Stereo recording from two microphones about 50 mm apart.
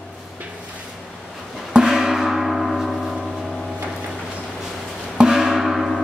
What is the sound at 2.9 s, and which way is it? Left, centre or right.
Gong, centre.